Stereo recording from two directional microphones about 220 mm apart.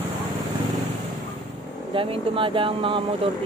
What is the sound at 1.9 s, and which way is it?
Speech, 25° right (ahead or behind).